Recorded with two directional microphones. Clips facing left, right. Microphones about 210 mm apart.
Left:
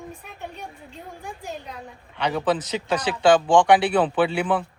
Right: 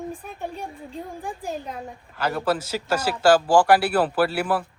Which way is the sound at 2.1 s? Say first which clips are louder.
Left 1 dB; 5° right (ahead or behind).